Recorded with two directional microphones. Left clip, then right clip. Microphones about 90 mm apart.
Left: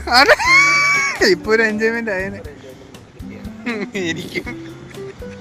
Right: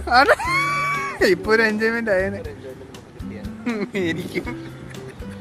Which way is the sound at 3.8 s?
30° right (ahead or behind).